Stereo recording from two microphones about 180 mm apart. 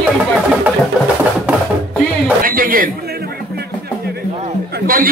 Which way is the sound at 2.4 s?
50° right (ahead or behind).